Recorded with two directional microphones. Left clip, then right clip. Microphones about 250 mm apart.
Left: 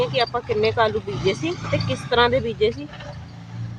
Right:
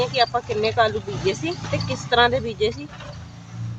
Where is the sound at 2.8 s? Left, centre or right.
Left.